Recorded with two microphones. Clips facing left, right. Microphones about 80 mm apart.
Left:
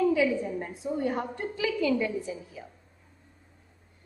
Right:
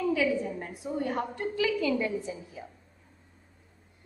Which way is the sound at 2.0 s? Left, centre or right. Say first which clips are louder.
Even; right.